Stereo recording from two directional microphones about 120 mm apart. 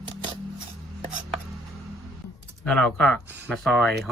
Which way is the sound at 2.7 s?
5° left (ahead or behind).